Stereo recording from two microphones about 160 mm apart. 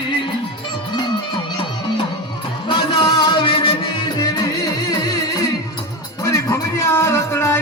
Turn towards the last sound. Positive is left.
turn(degrees=15)  # may be behind; listen again after turning